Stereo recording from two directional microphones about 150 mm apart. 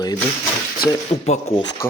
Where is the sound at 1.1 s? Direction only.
45° left (ahead or behind).